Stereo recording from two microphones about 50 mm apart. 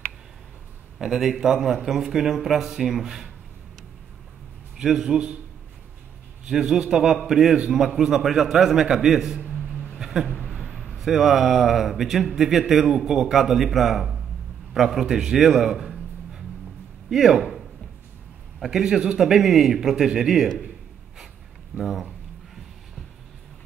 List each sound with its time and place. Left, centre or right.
0.9 s a man's voice: centre
4.7 s a man's voice: centre
6.4 s a man's voice: centre
9.9 s a sound: centre
10.5 s a sound: right
10.9 s a man's voice: centre
21.7 s a man's voice: centre